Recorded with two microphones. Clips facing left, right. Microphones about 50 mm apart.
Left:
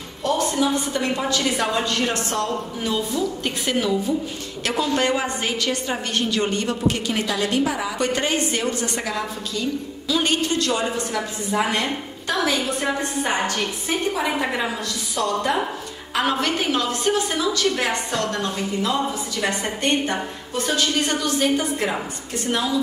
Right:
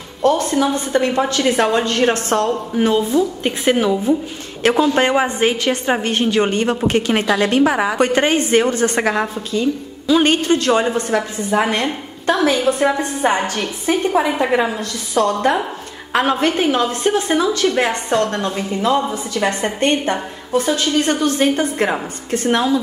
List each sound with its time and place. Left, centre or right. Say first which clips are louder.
0.2 s a woman's voice: right 6 dB; right
9.5 s a woman's voice: right 6 dB; right
14.2 s a woman's voice: right 5 dB; centre
14.8 s a woman's voice: right 7 dB; right
21.0 s a woman's voice: right 5 dB; right